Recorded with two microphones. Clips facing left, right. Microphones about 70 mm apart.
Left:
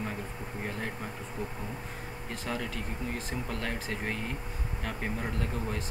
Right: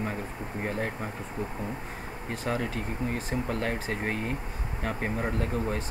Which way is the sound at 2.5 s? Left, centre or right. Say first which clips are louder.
Right 5 dB; right.